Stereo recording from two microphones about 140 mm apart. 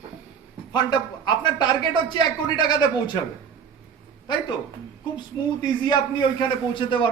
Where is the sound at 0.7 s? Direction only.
35° left (ahead or behind).